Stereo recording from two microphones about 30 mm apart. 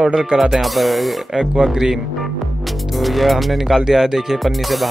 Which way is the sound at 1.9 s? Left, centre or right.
Centre.